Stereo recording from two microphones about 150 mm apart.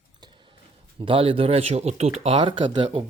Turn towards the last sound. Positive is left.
turn(degrees=-35)  # may be behind; listen again after turning